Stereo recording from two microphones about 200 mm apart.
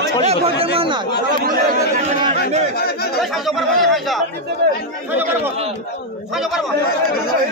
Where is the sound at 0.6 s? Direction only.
25° right (ahead or behind).